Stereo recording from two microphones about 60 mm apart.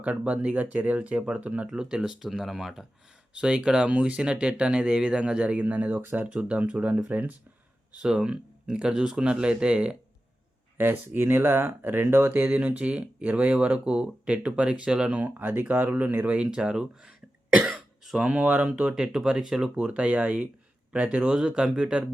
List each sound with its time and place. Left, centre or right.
0.0 s speech: right
1.6 s speech: centre
3.3 s speech: centre
6.0 s speech: right
6.2 s speech: right
10.8 s speech: right
12.5 s speech: right
15.1 s speech: right; by 18.2 s centre
18.2 s speech: right
19.7 s speech: centre